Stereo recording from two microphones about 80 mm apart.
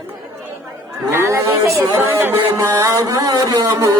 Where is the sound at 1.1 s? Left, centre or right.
Right.